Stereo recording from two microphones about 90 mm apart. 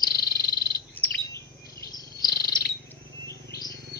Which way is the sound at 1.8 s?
45° left (ahead or behind).